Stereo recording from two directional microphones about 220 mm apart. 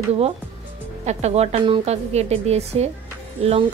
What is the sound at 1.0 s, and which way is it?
Speech, 30° right (ahead or behind).